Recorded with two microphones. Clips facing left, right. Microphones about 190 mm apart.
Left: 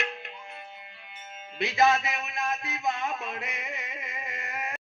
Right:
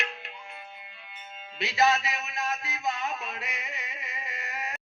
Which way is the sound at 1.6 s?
50° left (ahead or behind).